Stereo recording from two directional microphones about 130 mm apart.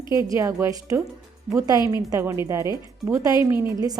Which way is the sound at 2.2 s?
20° right (ahead or behind).